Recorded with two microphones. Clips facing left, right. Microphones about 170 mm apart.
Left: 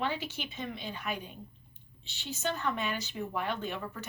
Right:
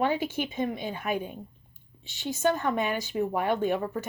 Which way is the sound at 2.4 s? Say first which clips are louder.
Right 7 dB; 50° right (ahead or behind).